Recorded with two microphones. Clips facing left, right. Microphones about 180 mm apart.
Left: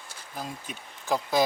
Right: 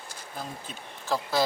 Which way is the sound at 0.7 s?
15° left (ahead or behind).